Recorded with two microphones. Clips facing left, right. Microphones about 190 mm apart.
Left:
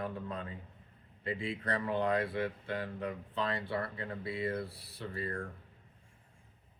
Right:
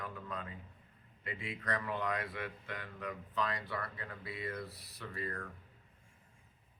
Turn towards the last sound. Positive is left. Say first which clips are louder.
# left 4 dB
turn(degrees=30)  # may be behind; listen again after turning